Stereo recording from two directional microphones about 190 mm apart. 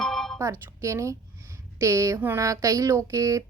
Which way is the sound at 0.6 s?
15° right (ahead or behind).